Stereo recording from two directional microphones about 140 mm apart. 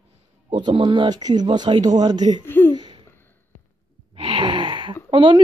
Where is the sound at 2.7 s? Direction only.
30° right (ahead or behind).